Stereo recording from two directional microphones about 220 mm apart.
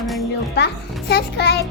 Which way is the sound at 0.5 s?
50° left (ahead or behind).